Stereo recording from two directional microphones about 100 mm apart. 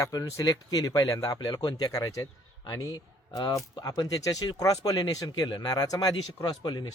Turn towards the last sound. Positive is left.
turn(degrees=45)  # may be behind; listen again after turning